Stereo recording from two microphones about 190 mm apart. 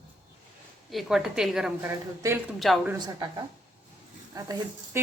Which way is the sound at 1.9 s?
15° right (ahead or behind).